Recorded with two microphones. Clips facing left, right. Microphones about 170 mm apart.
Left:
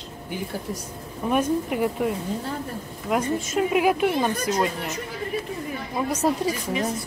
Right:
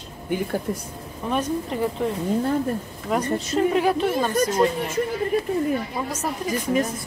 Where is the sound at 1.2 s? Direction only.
10° left (ahead or behind).